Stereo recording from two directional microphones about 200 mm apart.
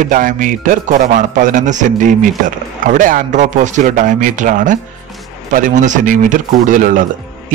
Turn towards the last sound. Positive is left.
turn(degrees=-40)  # may be behind; listen again after turning